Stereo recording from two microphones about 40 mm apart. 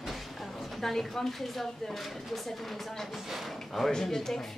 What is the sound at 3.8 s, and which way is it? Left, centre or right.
Speech, centre.